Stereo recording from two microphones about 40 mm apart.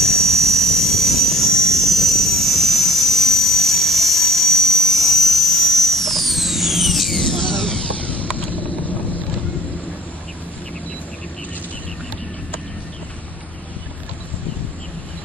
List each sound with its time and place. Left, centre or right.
0.0 s vehicle: centre
7.3 s a sound: centre
8.1 s vehicle: left